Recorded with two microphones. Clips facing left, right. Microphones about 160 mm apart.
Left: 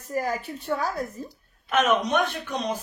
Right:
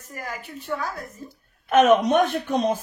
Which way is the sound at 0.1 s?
30° left (ahead or behind).